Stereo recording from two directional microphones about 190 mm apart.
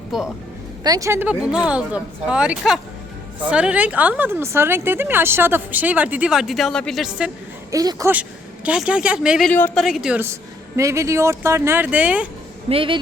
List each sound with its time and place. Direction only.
0.1 s speech: centre (ahead or behind)
0.9 s speech: 15° right (ahead or behind); by 7.3 s centre (ahead or behind)
7.7 s speech: 20° right (ahead or behind)
9.5 s speech: 10° left (ahead or behind)
9.8 s speech: centre (ahead or behind)
12.6 s a woman's voice: 30° right (ahead or behind)